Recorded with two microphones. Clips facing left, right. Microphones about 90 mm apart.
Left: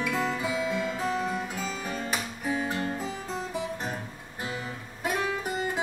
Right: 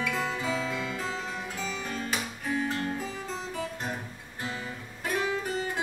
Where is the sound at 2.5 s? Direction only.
15° left (ahead or behind).